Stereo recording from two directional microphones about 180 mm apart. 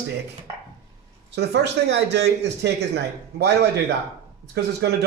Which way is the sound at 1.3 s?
70° right (ahead or behind).